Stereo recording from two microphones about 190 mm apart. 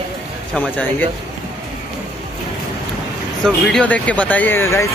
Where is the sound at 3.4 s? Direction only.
5° left (ahead or behind).